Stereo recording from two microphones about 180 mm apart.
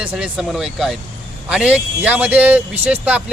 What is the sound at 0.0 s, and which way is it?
Speech, 5° right (ahead or behind).